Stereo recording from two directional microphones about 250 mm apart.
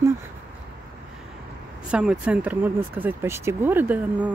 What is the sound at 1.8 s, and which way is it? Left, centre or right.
Speech, centre.